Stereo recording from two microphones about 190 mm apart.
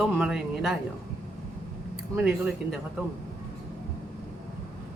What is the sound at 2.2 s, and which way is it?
Speech, centre (ahead or behind).